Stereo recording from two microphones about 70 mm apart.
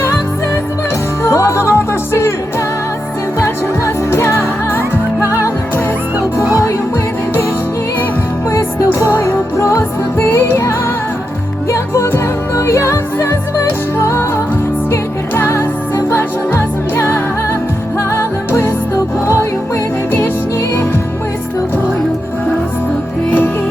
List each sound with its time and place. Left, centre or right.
1.2 s music: left
3.4 s music: left
8.4 s music: left
11.7 s music: left
15.4 s music: left